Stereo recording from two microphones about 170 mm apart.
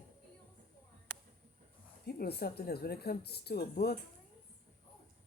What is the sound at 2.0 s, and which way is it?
Speech, 70° left (ahead or behind).